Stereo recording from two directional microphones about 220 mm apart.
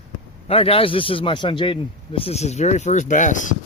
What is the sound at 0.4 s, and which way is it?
A man's voice, 25° left (ahead or behind).